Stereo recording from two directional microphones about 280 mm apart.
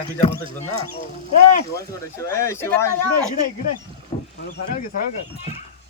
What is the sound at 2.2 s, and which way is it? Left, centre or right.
Speech, centre.